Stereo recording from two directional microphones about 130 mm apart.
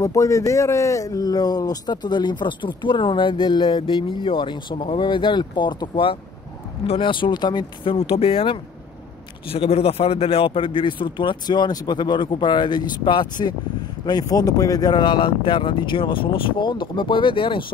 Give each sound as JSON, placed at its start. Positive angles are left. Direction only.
{"t": 0.0, "sound": "speech", "side_deg": 25}